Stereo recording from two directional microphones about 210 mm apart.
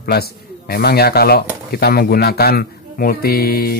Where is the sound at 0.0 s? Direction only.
45° left (ahead or behind).